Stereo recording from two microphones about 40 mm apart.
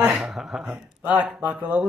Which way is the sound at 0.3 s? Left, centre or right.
Centre.